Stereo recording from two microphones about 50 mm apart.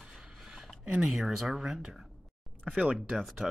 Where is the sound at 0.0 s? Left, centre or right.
Centre.